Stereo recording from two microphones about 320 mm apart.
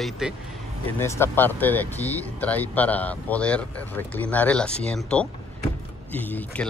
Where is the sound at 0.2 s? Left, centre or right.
Centre.